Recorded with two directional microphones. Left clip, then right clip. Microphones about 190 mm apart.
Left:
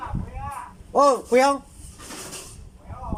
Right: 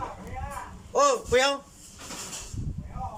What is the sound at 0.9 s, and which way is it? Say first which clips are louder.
Speech: left 5 dB; 35° left (ahead or behind).